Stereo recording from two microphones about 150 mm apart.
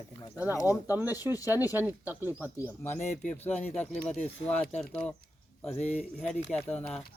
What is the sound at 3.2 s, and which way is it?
Speech, 10° left (ahead or behind).